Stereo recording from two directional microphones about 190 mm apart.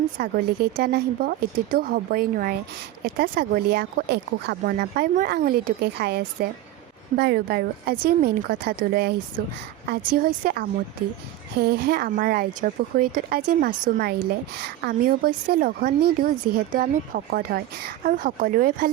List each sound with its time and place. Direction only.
0.2 s speech: 55° right (ahead or behind)